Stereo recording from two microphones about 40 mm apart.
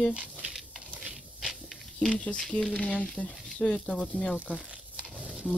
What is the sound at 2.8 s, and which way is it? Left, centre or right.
Speech, left.